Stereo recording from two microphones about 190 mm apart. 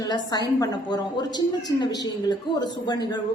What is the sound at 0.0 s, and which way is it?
A man's voice, 20° left (ahead or behind).